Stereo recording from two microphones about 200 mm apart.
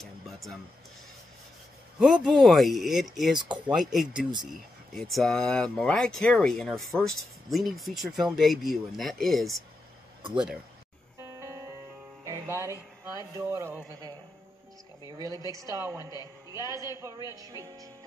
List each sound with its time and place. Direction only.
0.0 s music: centre (ahead or behind)
2.0 s speech: 5° right (ahead or behind)
11.3 s music: 15° right (ahead or behind)
13.0 s speech: 15° right (ahead or behind)
17.3 s speech: 15° right (ahead or behind)